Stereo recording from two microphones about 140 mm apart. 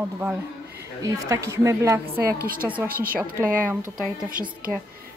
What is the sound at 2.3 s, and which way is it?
Speech, 90° right.